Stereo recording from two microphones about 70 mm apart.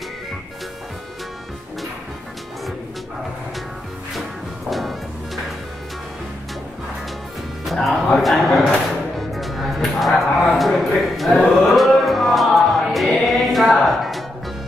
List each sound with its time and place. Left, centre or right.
4.6 s music: centre
7.6 s music: centre